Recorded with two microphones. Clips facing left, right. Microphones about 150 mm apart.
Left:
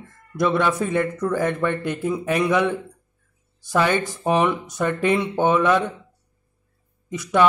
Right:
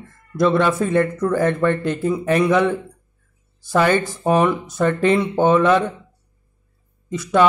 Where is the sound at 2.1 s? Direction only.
Centre (ahead or behind).